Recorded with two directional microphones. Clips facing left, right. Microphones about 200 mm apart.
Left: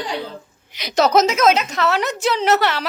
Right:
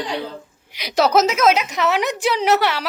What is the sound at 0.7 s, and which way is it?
A woman's voice, 10° right (ahead or behind).